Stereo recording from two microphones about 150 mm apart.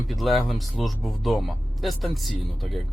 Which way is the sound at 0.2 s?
Centre (ahead or behind).